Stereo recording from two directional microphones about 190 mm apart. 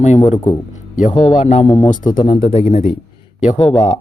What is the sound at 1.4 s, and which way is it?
Speech, 40° left (ahead or behind).